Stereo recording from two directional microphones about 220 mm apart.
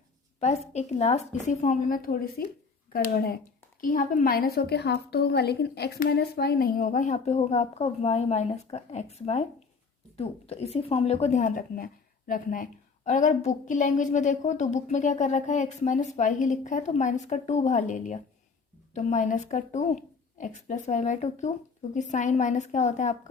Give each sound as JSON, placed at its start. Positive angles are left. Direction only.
{"t": 0.3, "sound": "a woman's voice", "side_deg": 30}